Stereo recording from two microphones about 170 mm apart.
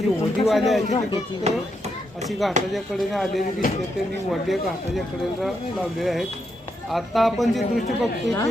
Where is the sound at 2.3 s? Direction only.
Centre (ahead or behind).